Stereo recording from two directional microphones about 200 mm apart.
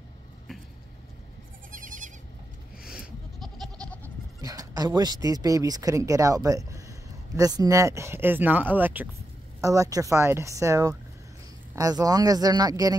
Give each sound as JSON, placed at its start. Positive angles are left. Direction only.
{"t": 1.7, "sound": "goat", "side_deg": -40}
{"t": 2.9, "sound": "goat", "side_deg": 0}
{"t": 4.0, "sound": "speech", "side_deg": -15}